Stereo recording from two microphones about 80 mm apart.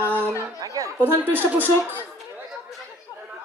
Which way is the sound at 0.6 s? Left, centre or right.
Right.